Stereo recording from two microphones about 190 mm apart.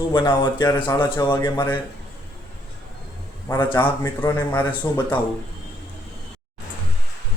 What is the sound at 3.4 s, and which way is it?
Speech, 10° left (ahead or behind).